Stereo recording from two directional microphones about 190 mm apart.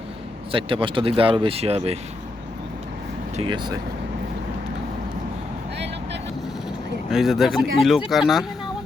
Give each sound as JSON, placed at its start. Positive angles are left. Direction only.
{"t": 0.5, "sound": "speech", "side_deg": -25}
{"t": 3.3, "sound": "speech", "side_deg": -25}
{"t": 5.7, "sound": "vehicle", "side_deg": -65}
{"t": 7.1, "sound": "speech", "side_deg": 0}